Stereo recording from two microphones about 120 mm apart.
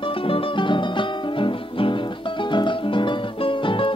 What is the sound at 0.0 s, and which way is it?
Music, 50° left (ahead or behind).